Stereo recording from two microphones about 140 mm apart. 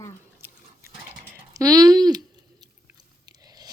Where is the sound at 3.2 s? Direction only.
25° right (ahead or behind).